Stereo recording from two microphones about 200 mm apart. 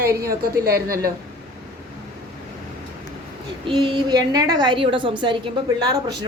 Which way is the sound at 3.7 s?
25° right (ahead or behind).